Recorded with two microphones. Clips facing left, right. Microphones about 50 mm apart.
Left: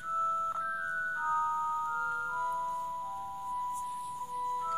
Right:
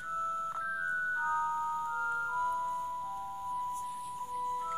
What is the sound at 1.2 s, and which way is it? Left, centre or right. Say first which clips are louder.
Music: left 1 dB; centre.